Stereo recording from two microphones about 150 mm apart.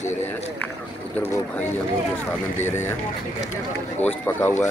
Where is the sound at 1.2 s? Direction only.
15° left (ahead or behind).